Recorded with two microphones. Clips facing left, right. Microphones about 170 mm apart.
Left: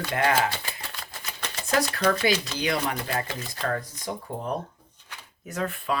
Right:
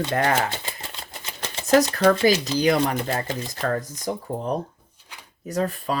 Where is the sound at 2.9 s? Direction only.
25° right (ahead or behind).